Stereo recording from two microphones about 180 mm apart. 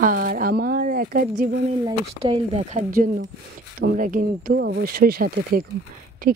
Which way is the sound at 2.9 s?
50° right (ahead or behind).